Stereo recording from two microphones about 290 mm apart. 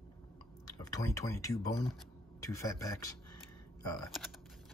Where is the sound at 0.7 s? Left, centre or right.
Centre.